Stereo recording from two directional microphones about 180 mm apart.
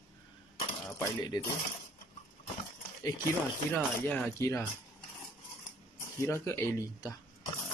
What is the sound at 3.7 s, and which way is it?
Speech, 5° left (ahead or behind).